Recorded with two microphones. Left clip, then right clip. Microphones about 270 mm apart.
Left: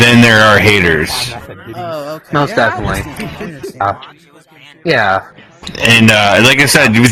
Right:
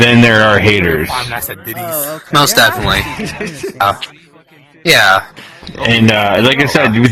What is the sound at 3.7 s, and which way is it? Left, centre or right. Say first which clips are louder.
Speech: right 2 dB; right.